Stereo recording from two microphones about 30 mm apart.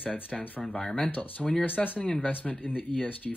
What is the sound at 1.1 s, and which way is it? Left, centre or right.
Speech, left.